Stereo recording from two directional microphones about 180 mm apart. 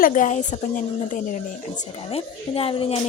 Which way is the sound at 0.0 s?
45° left (ahead or behind).